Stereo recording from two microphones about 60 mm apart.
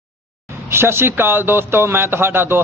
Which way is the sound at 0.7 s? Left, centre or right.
Right.